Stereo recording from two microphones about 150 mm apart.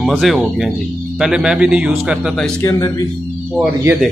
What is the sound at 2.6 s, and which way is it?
Speech, 25° left (ahead or behind).